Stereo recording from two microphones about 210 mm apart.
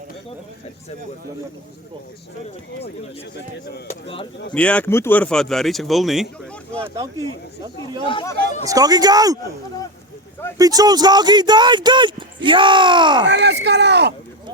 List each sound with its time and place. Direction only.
4.5 s speech: 5° left (ahead or behind)
6.7 s speech: 15° right (ahead or behind)
8.0 s speech: 20° left (ahead or behind)
8.6 s speech: 15° right (ahead or behind)
10.6 s speech: 15° right (ahead or behind)
13.2 s speech: 55° right (ahead or behind)